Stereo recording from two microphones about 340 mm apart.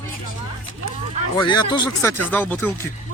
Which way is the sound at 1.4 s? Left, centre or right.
Centre.